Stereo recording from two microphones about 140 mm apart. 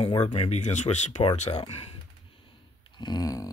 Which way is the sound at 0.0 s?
45° left (ahead or behind).